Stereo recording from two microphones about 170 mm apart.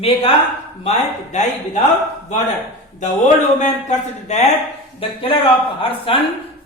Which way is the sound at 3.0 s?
45° left (ahead or behind).